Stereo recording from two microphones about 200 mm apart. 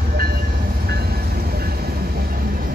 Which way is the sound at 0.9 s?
50° right (ahead or behind).